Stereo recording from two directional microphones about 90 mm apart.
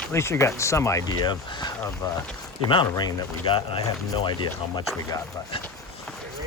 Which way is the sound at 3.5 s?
80° left.